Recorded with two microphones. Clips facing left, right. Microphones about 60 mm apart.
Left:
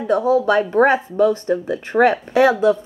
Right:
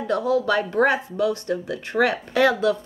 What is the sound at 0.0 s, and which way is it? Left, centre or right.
Speech, left.